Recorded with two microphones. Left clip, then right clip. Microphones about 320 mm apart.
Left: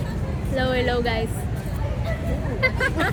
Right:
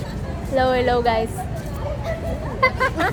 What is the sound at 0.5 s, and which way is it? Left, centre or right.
Speech, centre.